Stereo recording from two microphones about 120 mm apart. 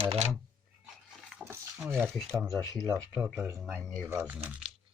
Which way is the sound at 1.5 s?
25° right (ahead or behind).